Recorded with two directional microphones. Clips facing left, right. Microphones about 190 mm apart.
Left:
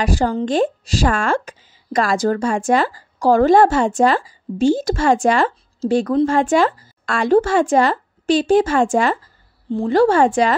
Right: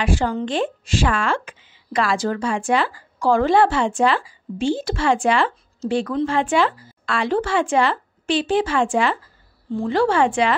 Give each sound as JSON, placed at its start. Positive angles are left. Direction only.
{"t": 0.0, "sound": "speech", "side_deg": 40}